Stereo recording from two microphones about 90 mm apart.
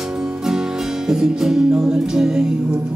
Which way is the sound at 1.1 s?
5° right (ahead or behind).